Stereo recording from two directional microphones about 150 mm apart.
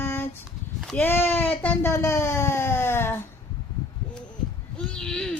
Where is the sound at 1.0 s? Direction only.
15° left (ahead or behind).